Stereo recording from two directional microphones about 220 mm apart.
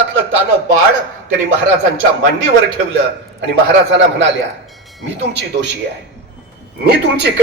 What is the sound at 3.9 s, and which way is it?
A man's voice, 55° right (ahead or behind).